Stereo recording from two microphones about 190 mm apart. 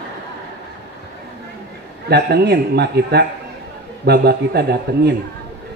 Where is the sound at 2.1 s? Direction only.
60° right (ahead or behind).